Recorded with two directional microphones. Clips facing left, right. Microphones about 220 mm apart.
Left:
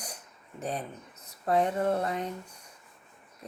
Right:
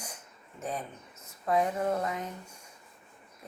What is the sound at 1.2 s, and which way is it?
Speech, 35° left (ahead or behind).